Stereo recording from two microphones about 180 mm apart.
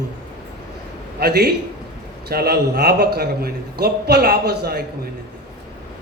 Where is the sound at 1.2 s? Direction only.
60° right (ahead or behind).